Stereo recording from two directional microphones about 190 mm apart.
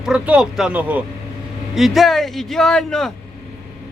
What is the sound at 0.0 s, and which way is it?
A man's voice, 5° right (ahead or behind).